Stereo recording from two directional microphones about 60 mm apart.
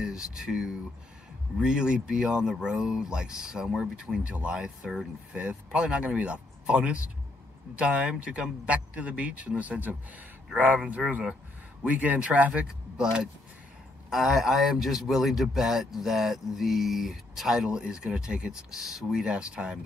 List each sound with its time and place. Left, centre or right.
0.0 s speech: centre; by 9.9 s right
11.1 s speech: right
12.6 s a man's voice: centre